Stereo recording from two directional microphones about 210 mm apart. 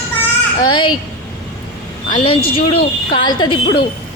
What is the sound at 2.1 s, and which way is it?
A woman's voice, 25° left (ahead or behind).